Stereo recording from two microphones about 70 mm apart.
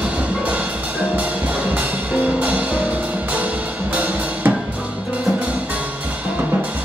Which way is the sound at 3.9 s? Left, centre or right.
Right.